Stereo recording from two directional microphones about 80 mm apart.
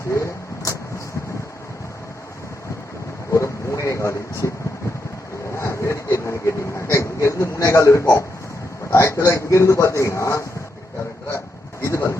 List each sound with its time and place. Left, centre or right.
0.1 s vehicle: left
3.3 s vehicle: left
5.5 s vehicle: left
7.7 s speech: left
11.8 s a sound: left